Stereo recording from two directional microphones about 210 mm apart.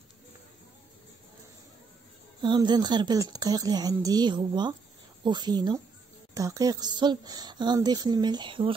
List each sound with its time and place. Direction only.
2.4 s speech: 20° right (ahead or behind)